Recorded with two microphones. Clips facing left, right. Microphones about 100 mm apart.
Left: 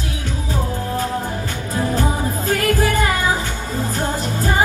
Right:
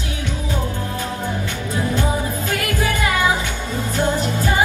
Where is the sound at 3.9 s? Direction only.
35° left (ahead or behind).